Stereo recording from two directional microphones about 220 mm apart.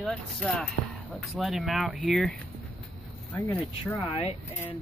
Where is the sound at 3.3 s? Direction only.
10° left (ahead or behind).